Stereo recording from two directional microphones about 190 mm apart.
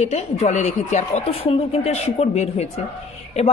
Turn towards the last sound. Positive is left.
turn(degrees=35)  # may be behind; listen again after turning